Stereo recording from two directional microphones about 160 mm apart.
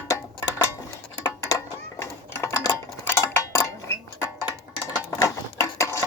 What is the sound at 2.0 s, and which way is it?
Dishes, 20° left (ahead or behind).